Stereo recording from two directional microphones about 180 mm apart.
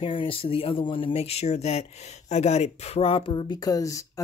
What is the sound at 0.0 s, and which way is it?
Speech, 30° left (ahead or behind).